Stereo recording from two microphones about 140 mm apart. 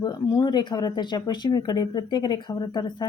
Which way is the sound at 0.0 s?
30° left (ahead or behind).